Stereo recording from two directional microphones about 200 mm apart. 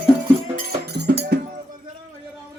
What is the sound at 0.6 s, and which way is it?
Music, 55° right (ahead or behind).